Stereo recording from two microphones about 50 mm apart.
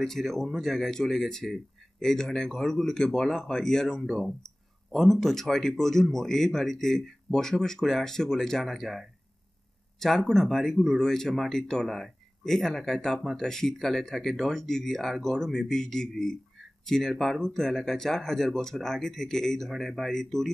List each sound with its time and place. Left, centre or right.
0.0 s speech: centre